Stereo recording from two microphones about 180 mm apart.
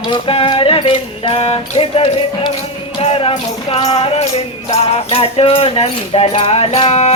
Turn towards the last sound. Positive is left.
turn(degrees=35)  # may be behind; listen again after turning